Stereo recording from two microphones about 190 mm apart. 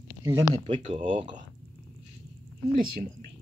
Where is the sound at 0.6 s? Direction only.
30° right (ahead or behind).